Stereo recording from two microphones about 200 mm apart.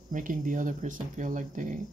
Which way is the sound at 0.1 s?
40° right (ahead or behind).